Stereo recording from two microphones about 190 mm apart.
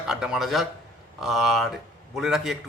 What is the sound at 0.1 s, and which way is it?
Speech, 5° right (ahead or behind).